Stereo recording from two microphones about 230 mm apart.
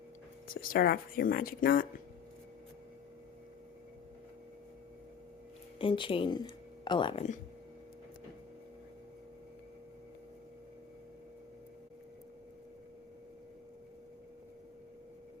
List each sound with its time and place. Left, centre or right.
0.4 s speech: left
5.8 s speech: left